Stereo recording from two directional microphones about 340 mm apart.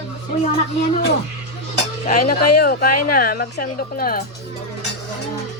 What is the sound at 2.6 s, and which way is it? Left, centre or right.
A woman's voice, left.